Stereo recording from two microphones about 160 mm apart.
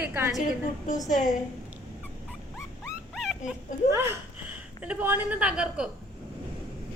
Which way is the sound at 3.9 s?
15° right (ahead or behind).